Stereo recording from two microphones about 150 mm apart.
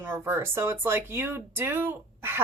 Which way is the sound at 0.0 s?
15° right (ahead or behind).